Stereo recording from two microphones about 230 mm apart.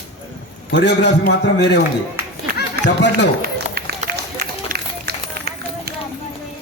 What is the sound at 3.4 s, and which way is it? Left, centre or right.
Run, right.